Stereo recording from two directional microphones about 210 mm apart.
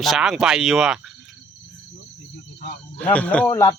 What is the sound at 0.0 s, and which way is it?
Speech, centre (ahead or behind).